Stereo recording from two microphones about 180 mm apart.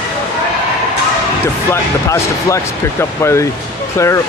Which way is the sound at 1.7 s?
15° left (ahead or behind).